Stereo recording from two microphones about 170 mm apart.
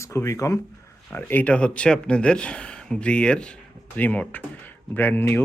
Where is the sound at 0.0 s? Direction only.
15° left (ahead or behind).